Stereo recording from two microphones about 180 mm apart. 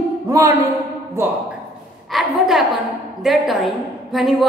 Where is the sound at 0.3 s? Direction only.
20° right (ahead or behind).